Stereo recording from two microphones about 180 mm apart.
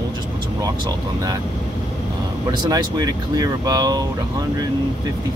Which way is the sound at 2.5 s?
20° right (ahead or behind).